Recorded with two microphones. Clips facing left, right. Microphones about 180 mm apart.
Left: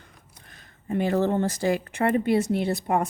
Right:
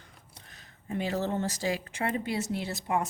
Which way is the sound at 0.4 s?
55° left (ahead or behind).